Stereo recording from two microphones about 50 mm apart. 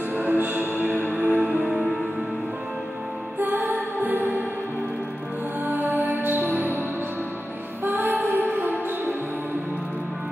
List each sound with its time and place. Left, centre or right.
0.2 s music: right
3.3 s music: right
5.7 s music: right
7.8 s music: right